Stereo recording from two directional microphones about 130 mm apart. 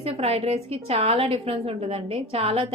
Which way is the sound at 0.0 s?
50° right (ahead or behind).